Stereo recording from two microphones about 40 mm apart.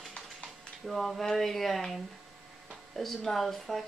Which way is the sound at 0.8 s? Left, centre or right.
Centre.